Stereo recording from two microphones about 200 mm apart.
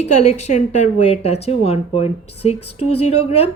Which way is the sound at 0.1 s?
35° left (ahead or behind).